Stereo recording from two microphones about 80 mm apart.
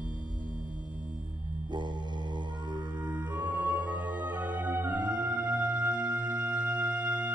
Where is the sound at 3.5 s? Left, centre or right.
Centre.